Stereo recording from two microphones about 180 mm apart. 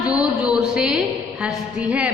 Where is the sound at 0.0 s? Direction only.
5° right (ahead or behind).